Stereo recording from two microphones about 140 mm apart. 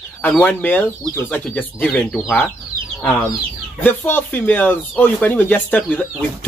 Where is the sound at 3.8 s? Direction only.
15° left (ahead or behind).